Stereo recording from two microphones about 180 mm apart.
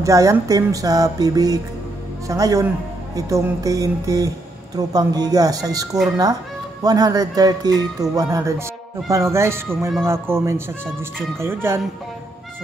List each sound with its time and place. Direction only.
0.0 s speech: 15° right (ahead or behind)